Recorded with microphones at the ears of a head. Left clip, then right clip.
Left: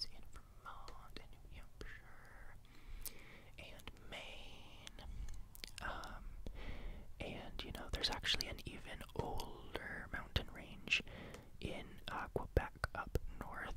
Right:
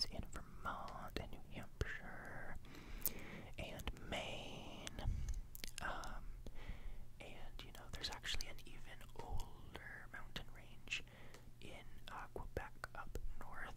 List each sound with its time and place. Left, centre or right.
0.1 s whispering: right
5.6 s whispering: centre
7.2 s whispering: left